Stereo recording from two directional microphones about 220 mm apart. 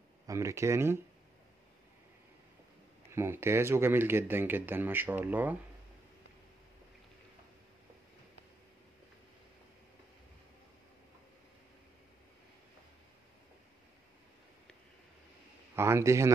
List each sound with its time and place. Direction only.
0.3 s speech: 15° right (ahead or behind)
3.1 s speech: 10° right (ahead or behind)
15.7 s speech: 10° right (ahead or behind)